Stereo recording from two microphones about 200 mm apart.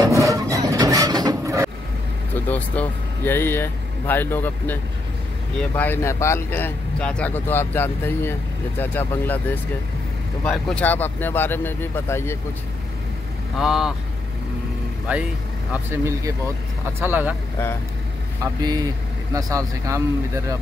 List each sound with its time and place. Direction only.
0.0 s wood: 15° right (ahead or behind)
2.4 s speech: 10° left (ahead or behind)
10.4 s speech: 5° left (ahead or behind)
13.6 s speech: centre (ahead or behind)
15.1 s speech: 5° right (ahead or behind)
18.4 s speech: 20° right (ahead or behind)